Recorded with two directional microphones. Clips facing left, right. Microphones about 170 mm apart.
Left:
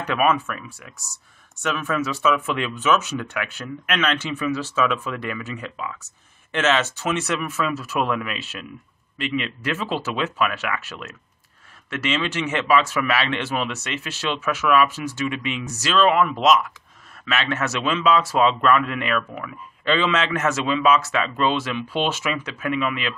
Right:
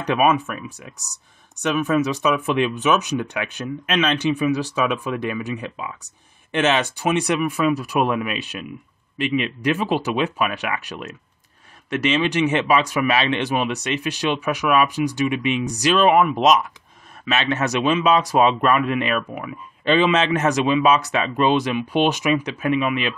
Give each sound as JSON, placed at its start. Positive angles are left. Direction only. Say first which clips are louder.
{"t": 0.0, "sound": "speech", "louder": "right 2 dB", "side_deg": -15}